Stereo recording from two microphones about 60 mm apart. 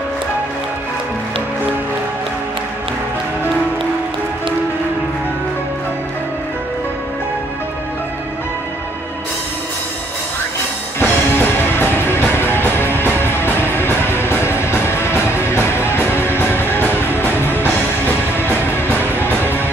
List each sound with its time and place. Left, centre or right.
11.0 s music: left